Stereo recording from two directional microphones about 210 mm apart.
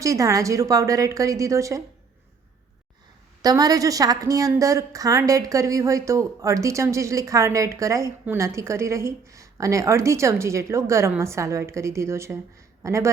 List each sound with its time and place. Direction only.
0.0 s a woman's voice: 15° right (ahead or behind)
3.4 s a woman's voice: 15° right (ahead or behind)